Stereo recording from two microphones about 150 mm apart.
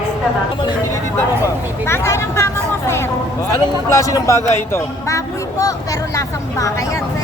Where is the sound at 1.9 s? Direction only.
15° left (ahead or behind).